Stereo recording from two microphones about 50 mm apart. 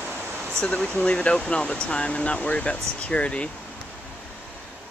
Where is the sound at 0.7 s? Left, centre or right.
Left.